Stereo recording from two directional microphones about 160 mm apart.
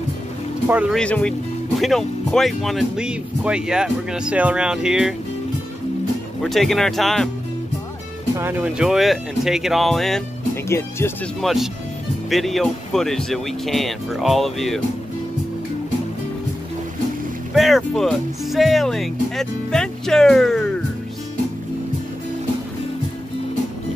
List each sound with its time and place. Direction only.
0.7 s speech: 10° right (ahead or behind)
0.9 s speech: 5° left (ahead or behind)
6.4 s speech: centre (ahead or behind)
8.4 s speech: 10° right (ahead or behind)
10.7 s speech: 15° left (ahead or behind)
11.4 s speech: centre (ahead or behind)
17.6 s speech: centre (ahead or behind)